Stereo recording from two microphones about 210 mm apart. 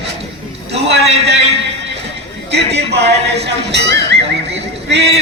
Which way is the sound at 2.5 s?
55° right (ahead or behind).